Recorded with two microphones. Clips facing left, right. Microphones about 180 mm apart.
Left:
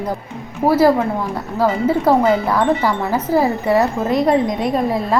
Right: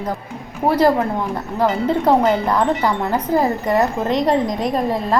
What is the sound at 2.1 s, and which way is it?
Speech, 20° right (ahead or behind).